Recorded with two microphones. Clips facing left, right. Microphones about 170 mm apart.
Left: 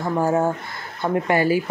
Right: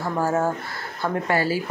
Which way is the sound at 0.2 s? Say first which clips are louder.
Left 2 dB; 15° left (ahead or behind).